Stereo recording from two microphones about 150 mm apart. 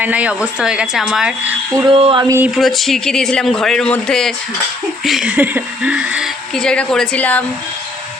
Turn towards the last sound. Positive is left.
turn(degrees=10)  # may be behind; listen again after turning